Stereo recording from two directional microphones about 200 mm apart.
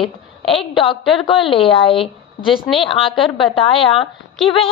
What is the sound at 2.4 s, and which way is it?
Speech, centre (ahead or behind).